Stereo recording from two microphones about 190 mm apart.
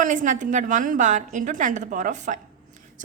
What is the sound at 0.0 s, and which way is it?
A woman's voice, 45° right (ahead or behind).